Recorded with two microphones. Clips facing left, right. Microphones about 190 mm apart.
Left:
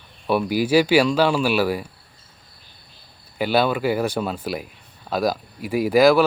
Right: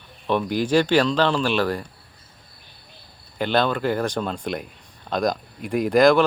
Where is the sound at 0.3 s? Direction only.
10° left (ahead or behind).